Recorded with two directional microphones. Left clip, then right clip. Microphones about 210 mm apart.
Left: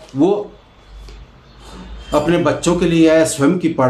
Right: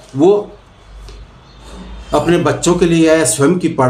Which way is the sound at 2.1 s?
5° right (ahead or behind).